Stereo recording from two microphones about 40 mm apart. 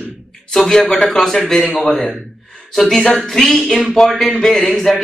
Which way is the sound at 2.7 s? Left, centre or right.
Centre.